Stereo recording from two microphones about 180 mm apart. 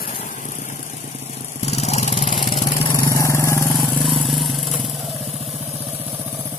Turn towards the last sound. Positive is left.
turn(degrees=0)  # may be behind; listen again after turning